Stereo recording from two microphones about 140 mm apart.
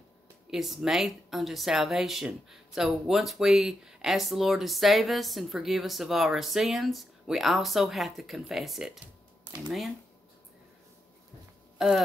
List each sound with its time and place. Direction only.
0.5 s speech: centre (ahead or behind)